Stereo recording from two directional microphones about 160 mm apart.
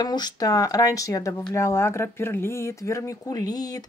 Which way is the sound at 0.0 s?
25° left (ahead or behind).